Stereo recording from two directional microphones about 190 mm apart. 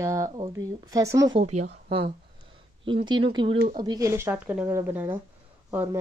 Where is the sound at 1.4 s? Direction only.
35° right (ahead or behind).